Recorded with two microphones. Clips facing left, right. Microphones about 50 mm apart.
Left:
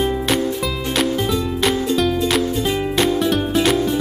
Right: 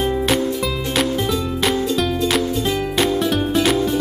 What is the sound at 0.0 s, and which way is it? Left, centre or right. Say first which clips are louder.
Music: even; centre.